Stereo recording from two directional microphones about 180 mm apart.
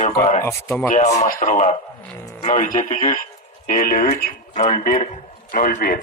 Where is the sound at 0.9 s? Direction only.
40° left (ahead or behind).